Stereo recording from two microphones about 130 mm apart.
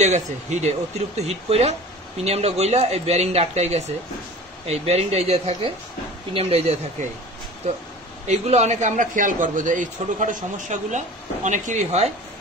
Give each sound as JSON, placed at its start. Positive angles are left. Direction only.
{"t": 0.0, "sound": "speech", "side_deg": -60}
{"t": 8.3, "sound": "a man's voice", "side_deg": -60}